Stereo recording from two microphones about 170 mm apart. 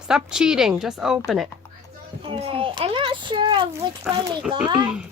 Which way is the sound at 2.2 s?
30° right (ahead or behind).